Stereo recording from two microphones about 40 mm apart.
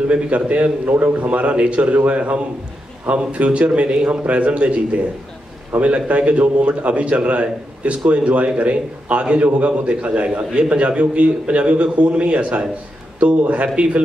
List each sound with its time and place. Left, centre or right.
0.1 s a man's voice: right
0.8 s a man's voice: right
1.2 s a man's voice: right
13.8 s a man's voice: right